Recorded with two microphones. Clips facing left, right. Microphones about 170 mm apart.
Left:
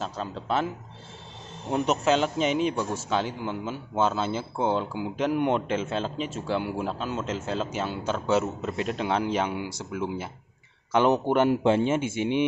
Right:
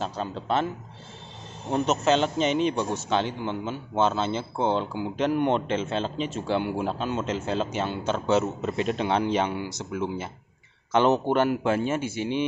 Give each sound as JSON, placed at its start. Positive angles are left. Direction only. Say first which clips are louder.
{"t": 0.0, "sound": "a man's voice", "louder": "right 2 dB", "side_deg": 5}
{"t": 1.7, "sound": "a man's voice", "louder": "right 1 dB", "side_deg": 5}
{"t": 11.5, "sound": "speech", "louder": "left 3 dB", "side_deg": 25}